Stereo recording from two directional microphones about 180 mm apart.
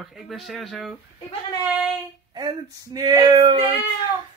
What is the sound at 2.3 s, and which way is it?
Speech, 25° right (ahead or behind).